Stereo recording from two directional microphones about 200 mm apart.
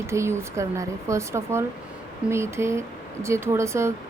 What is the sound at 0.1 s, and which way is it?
Speech, 15° right (ahead or behind).